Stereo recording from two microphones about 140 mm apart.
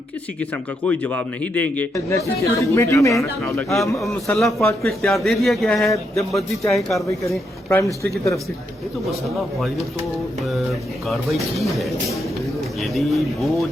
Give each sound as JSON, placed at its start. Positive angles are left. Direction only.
{"t": 0.3, "sound": "speech", "side_deg": 10}
{"t": 2.0, "sound": "speech", "side_deg": 20}
{"t": 3.4, "sound": "a man's voice", "side_deg": 5}
{"t": 7.3, "sound": "speech", "side_deg": 20}
{"t": 10.4, "sound": "a man's voice", "side_deg": 0}
{"t": 12.9, "sound": "a man's voice", "side_deg": 0}